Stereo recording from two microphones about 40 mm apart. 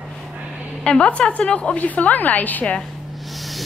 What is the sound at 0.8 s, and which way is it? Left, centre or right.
Speech, left.